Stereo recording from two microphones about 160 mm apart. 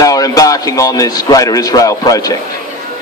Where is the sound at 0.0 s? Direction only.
20° left (ahead or behind).